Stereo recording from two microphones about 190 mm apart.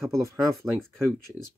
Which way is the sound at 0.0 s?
15° right (ahead or behind).